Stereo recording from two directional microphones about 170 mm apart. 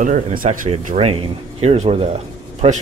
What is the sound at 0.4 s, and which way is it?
Speech, 45° right (ahead or behind).